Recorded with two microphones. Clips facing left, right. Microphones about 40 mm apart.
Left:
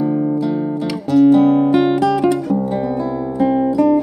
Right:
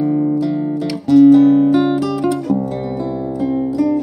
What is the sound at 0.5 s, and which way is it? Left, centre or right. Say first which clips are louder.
Guitar: even; centre.